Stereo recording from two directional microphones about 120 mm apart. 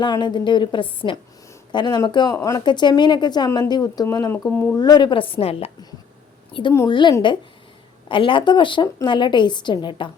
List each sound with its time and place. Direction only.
0.0 s a woman's voice: 40° left (ahead or behind)
4.5 s speech: 15° left (ahead or behind)
4.8 s a woman's voice: 35° left (ahead or behind); by 5.7 s 55° left (ahead or behind)
6.5 s a woman's voice: 45° left (ahead or behind)